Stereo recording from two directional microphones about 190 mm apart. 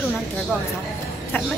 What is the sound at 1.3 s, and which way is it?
Speech, 10° left (ahead or behind).